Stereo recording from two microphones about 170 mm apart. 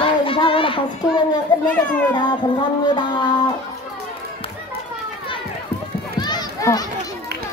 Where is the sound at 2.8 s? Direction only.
25° left (ahead or behind).